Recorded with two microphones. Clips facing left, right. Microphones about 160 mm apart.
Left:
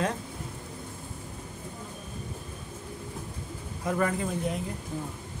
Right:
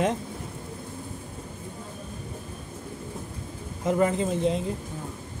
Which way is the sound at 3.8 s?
20° right (ahead or behind).